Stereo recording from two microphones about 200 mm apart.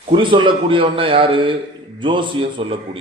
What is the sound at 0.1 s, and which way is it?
Speech, 25° right (ahead or behind).